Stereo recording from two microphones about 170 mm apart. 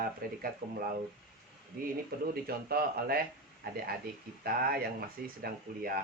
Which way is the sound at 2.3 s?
65° right (ahead or behind).